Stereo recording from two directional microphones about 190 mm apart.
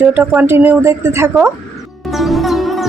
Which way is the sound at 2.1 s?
Centre (ahead or behind).